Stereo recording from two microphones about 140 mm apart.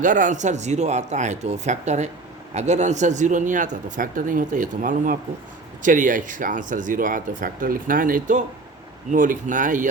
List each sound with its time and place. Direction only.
0.0 s speech: 65° right (ahead or behind)